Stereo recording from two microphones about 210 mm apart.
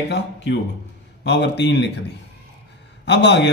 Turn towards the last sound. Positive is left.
turn(degrees=55)  # may be behind; listen again after turning